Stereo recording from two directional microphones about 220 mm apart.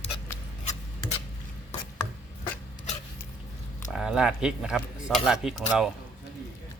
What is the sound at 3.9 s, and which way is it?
A man's voice, 5° right (ahead or behind).